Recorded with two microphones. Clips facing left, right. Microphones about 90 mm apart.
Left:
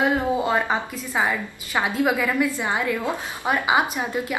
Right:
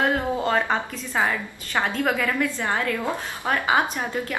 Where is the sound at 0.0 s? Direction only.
5° left (ahead or behind).